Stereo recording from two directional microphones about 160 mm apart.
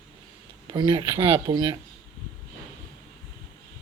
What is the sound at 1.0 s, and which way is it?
Speech, 15° right (ahead or behind).